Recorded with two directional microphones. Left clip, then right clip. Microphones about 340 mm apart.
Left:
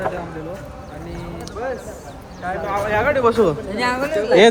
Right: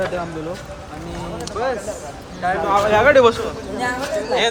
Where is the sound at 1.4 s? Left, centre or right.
Right.